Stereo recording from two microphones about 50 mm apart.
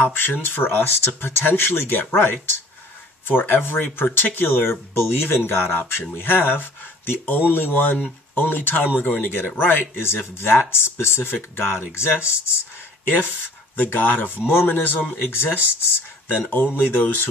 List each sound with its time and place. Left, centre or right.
0.1 s speech: left
13.7 s speech: left